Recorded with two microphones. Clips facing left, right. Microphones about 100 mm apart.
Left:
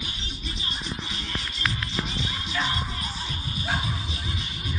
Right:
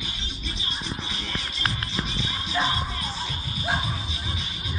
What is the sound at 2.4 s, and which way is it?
Music, 30° right (ahead or behind).